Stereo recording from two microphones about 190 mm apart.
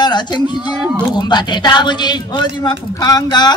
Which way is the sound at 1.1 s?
20° left (ahead or behind).